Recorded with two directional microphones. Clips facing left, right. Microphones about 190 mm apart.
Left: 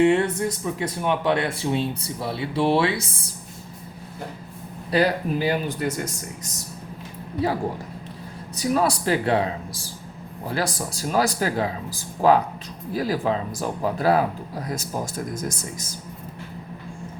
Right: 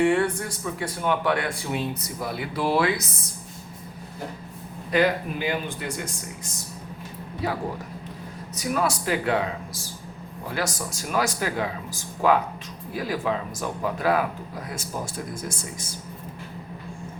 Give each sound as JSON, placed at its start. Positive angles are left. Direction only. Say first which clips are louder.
{"t": 0.0, "sound": "a man's voice", "louder": "left 3 dB", "side_deg": 20}
{"t": 4.9, "sound": "speech", "louder": "left 1 dB", "side_deg": 35}
{"t": 8.5, "sound": "speech", "louder": "left 4 dB", "side_deg": 35}
{"t": 10.5, "sound": "speech", "louder": "left 3 dB", "side_deg": 35}